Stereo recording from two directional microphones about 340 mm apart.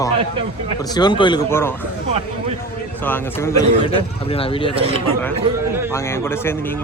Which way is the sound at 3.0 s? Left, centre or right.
Centre.